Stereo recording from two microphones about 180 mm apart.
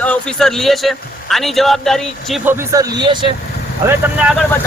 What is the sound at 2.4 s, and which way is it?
Speech, 20° right (ahead or behind).